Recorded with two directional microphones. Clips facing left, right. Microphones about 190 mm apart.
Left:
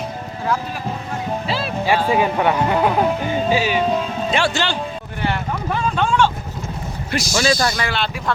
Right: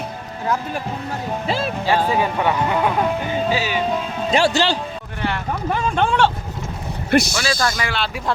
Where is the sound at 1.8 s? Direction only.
15° left (ahead or behind).